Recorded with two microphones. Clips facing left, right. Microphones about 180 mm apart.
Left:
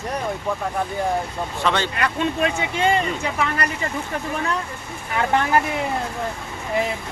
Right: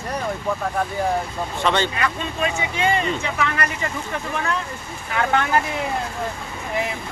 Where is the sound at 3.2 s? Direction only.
30° left (ahead or behind).